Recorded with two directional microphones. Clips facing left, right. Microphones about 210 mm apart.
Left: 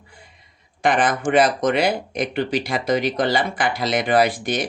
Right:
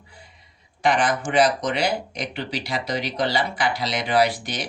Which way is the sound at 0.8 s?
50° left (ahead or behind).